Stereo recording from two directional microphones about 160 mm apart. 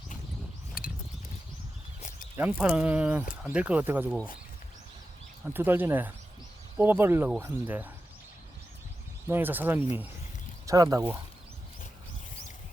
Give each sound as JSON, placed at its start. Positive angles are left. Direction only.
{"t": 0.8, "sound": "a sound", "side_deg": 65}
{"t": 2.3, "sound": "speech", "side_deg": -10}
{"t": 5.5, "sound": "speech", "side_deg": -15}
{"t": 9.2, "sound": "speech", "side_deg": -15}